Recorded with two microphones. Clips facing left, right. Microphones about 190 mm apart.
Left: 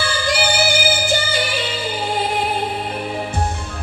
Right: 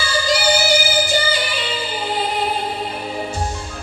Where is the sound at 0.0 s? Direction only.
55° left (ahead or behind).